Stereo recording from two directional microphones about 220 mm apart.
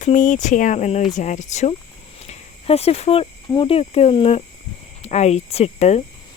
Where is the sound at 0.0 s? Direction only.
35° left (ahead or behind).